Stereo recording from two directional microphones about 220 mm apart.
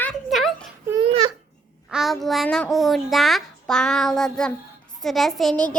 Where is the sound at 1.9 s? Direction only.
Centre (ahead or behind).